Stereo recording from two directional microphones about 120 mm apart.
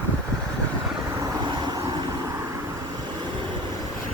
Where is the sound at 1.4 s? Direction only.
35° right (ahead or behind).